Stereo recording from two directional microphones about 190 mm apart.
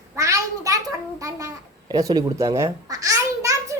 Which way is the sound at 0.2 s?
15° right (ahead or behind).